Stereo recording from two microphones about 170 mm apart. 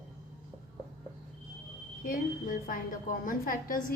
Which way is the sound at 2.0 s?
55° left (ahead or behind).